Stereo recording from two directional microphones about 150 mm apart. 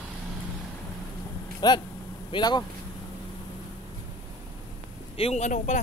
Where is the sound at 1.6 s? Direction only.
25° left (ahead or behind).